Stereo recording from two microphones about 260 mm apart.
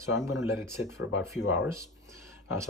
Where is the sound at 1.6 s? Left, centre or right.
Centre.